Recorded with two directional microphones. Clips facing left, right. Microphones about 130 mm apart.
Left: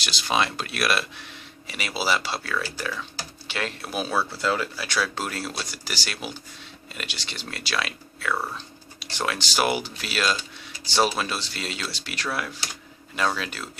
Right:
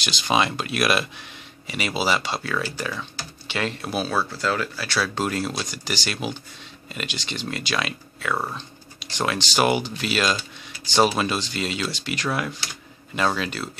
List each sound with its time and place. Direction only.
0.0 s speech: centre (ahead or behind)
2.4 s speech: 10° right (ahead or behind)
3.4 s speech: centre (ahead or behind); by 4.9 s 15° left (ahead or behind)
5.0 s speech: 5° left (ahead or behind)